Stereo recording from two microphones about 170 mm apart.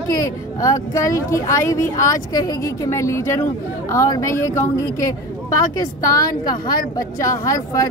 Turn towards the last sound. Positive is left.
turn(degrees=20)  # may be behind; listen again after turning